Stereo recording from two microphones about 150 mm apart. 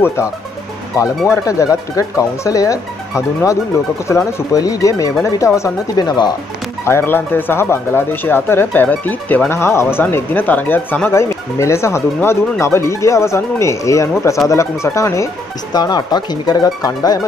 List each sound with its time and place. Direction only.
0.0 s speech: 20° left (ahead or behind)
1.3 s speech: 20° left (ahead or behind)
6.8 s speech: 15° left (ahead or behind)